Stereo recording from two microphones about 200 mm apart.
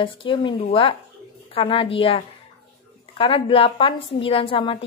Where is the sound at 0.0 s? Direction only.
25° left (ahead or behind).